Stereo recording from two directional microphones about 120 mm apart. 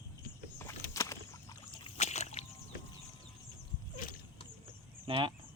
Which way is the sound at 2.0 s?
70° left (ahead or behind).